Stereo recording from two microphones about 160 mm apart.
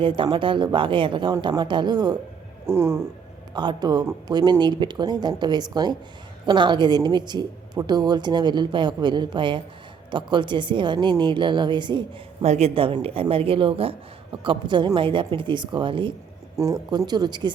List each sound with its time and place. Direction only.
0.0 s speech: 30° right (ahead or behind); by 3.0 s 15° right (ahead or behind)
3.5 s speech: 25° right (ahead or behind)
12.5 s a woman's voice: 40° right (ahead or behind)
16.6 s speech: 20° right (ahead or behind)